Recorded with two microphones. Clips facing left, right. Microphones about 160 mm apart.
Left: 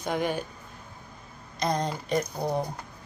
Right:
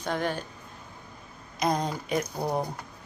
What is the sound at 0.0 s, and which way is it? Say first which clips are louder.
Speech: left 1 dB; 10° left (ahead or behind).